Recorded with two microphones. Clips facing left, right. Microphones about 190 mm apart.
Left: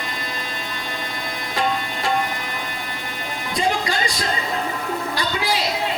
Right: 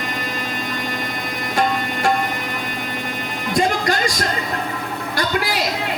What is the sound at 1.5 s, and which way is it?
Music, 50° right (ahead or behind).